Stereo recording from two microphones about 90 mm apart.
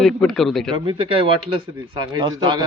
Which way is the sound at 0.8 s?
85° right.